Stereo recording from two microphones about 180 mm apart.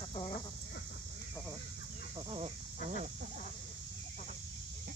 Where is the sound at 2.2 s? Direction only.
30° right (ahead or behind).